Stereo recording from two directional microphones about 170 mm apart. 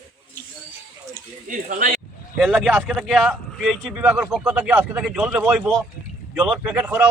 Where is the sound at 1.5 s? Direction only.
50° right (ahead or behind).